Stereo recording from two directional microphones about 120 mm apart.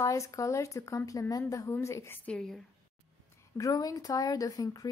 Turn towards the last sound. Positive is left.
turn(degrees=30)  # may be behind; listen again after turning